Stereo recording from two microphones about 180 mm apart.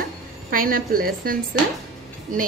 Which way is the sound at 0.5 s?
50° right (ahead or behind).